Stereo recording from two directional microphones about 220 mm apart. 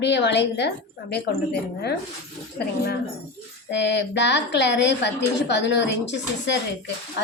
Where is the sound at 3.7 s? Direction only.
50° left (ahead or behind).